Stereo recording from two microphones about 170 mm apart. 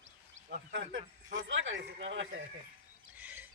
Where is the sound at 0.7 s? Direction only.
90° right.